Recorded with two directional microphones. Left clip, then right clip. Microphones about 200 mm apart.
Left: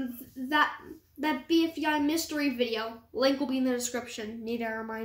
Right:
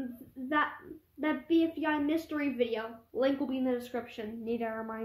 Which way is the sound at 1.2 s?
15° right (ahead or behind).